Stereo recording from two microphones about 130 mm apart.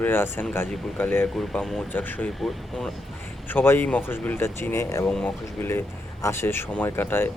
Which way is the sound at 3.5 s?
15° left (ahead or behind).